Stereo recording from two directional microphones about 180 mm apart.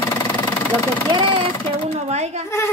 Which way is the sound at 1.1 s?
30° right (ahead or behind).